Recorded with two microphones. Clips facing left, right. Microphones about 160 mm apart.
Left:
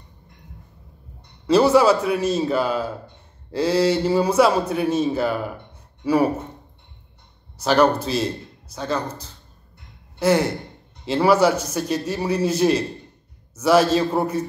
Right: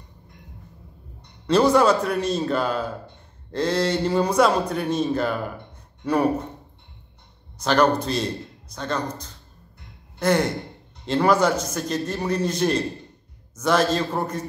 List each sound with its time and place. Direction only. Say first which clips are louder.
1.5 s a man's voice: left 2 dB; 5° left (ahead or behind)
7.5 s a man's voice: left 2 dB; 5° left (ahead or behind)